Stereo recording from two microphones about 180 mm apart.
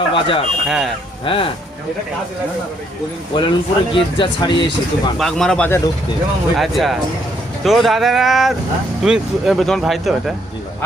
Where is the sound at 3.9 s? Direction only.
25° left (ahead or behind).